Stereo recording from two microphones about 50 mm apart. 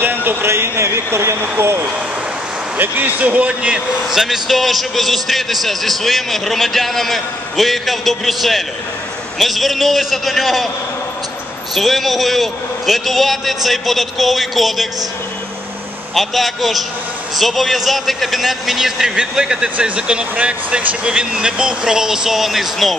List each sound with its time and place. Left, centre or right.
0.0 s a sound: right
0.5 s a man's voice: right
2.8 s a man's voice: right
4.1 s a man's voice: centre
11.7 s a man's voice: centre
16.2 s a man's voice: centre